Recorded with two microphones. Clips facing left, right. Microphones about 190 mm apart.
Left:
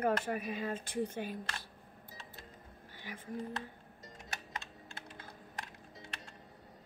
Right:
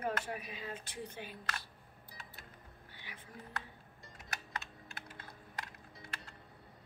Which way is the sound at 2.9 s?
45° left (ahead or behind).